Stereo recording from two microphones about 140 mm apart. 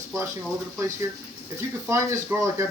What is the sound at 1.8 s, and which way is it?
Speech, 20° right (ahead or behind).